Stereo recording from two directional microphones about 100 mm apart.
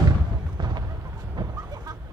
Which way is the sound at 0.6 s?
45° right (ahead or behind).